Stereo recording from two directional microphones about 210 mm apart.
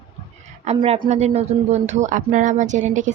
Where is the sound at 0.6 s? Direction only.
30° right (ahead or behind).